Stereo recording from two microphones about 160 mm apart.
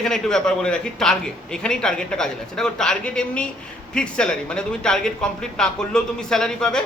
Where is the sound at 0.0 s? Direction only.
5° left (ahead or behind).